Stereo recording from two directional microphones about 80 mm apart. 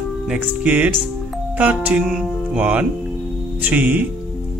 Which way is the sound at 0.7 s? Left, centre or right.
Centre.